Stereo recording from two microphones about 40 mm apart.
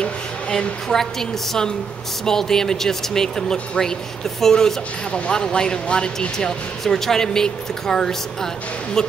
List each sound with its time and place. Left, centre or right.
0.0 s a sound: left
2.2 s a woman's voice: centre
5.1 s a woman's voice: left